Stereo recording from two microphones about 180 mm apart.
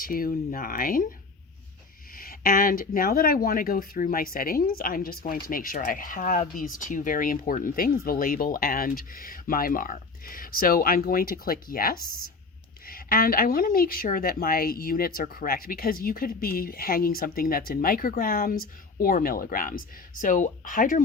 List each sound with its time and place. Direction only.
0.0 s speech: 55° left (ahead or behind)
2.1 s speech: 55° left (ahead or behind)